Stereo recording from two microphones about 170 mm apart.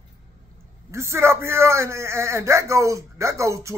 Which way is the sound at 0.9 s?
15° right (ahead or behind).